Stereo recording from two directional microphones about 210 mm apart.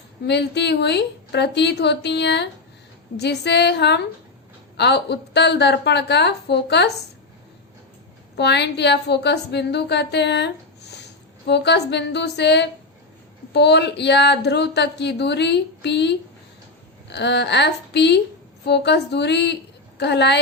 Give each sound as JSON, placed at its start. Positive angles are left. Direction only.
{"t": 0.3, "sound": "a woman's voice", "side_deg": 55}
{"t": 8.4, "sound": "a woman's voice", "side_deg": 55}